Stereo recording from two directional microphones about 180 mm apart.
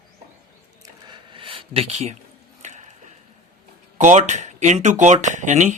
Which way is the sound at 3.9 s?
40° right (ahead or behind).